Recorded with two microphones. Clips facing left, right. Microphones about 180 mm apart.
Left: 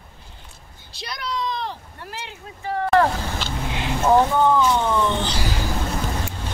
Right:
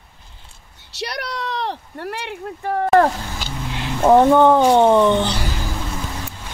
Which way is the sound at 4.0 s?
55° right (ahead or behind).